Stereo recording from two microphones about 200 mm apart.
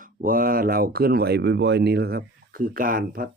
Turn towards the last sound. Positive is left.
turn(degrees=-45)  # may be behind; listen again after turning